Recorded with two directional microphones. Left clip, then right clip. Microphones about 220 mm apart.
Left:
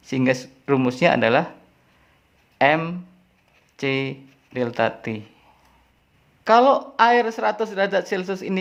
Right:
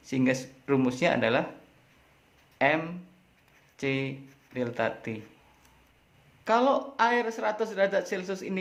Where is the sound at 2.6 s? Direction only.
25° left (ahead or behind).